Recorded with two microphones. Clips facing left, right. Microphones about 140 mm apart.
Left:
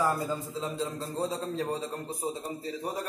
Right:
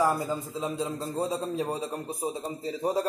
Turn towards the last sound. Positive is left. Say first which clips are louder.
# right 6 dB
turn(degrees=-25)  # may be behind; listen again after turning